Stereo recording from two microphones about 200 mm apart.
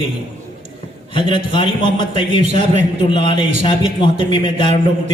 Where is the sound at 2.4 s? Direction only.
35° right (ahead or behind).